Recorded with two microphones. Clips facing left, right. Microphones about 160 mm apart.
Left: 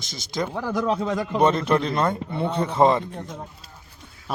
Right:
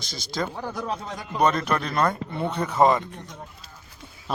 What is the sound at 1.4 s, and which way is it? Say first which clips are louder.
Speech: left 2 dB; 25° left (ahead or behind).